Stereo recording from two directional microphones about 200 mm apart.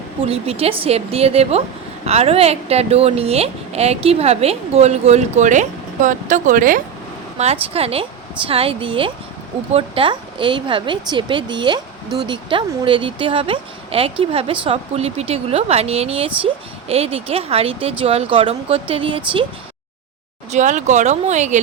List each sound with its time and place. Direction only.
0.2 s a woman's voice: 30° right (ahead or behind)
7.3 s a woman's voice: 30° right (ahead or behind)
20.5 s a woman's voice: 35° right (ahead or behind)